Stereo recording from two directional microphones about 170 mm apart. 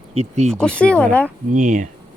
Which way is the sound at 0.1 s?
40° right (ahead or behind).